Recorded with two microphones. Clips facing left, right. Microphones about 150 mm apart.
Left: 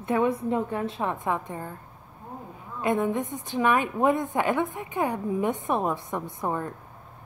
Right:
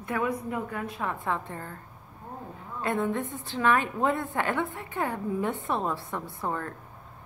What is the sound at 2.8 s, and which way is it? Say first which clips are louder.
A woman's voice: left 3 dB; 15° left (ahead or behind).